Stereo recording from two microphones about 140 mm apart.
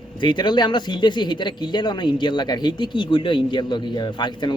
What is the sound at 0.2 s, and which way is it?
Speech, 30° left (ahead or behind).